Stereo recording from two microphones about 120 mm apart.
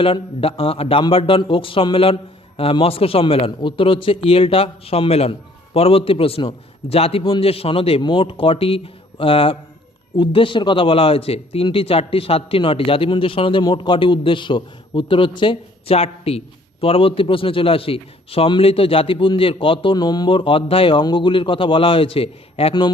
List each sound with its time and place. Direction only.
0.0 s a man's voice: 50° left (ahead or behind)